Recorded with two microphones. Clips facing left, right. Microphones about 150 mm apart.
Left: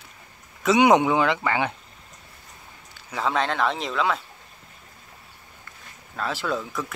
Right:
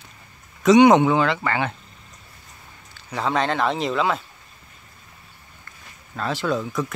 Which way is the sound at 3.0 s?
Centre (ahead or behind).